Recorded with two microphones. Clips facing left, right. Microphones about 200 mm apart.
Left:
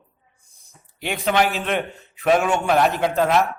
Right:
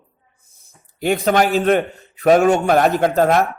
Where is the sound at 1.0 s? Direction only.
45° right (ahead or behind).